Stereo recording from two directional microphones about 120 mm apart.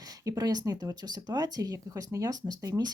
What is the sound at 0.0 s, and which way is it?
Speech, 30° right (ahead or behind).